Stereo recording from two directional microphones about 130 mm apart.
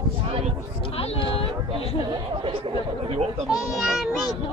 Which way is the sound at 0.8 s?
50° left (ahead or behind).